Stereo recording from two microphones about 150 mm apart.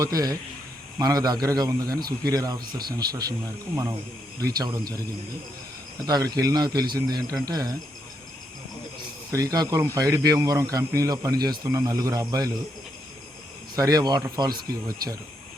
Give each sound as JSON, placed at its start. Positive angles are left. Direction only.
{"t": 0.0, "sound": "speech", "side_deg": -25}
{"t": 4.5, "sound": "speech", "side_deg": -25}
{"t": 6.1, "sound": "speech", "side_deg": -25}
{"t": 9.3, "sound": "speech", "side_deg": -25}
{"t": 13.7, "sound": "speech", "side_deg": -25}